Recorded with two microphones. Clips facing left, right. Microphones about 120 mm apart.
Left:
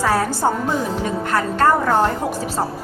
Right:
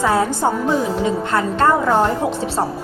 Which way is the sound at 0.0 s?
20° right (ahead or behind).